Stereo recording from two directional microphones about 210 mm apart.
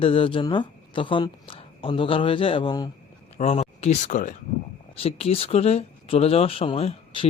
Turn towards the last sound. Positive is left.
turn(degrees=25)  # may be behind; listen again after turning